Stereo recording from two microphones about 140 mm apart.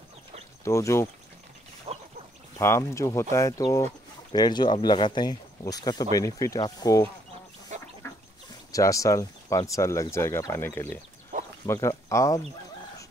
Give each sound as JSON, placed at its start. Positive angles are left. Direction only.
{"t": 0.7, "sound": "speech", "side_deg": 20}
{"t": 1.9, "sound": "duck", "side_deg": -45}
{"t": 2.6, "sound": "speech", "side_deg": 20}
{"t": 7.7, "sound": "duck", "side_deg": -60}
{"t": 8.7, "sound": "speech", "side_deg": 25}